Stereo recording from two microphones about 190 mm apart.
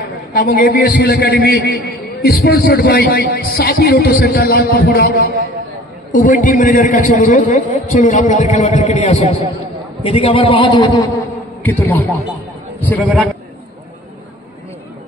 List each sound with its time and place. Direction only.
0.3 s a man's voice: 45° left (ahead or behind); by 11.1 s 20° left (ahead or behind)
11.6 s a man's voice: 10° left (ahead or behind)